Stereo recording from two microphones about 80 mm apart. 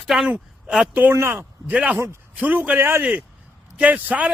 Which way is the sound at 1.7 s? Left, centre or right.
Centre.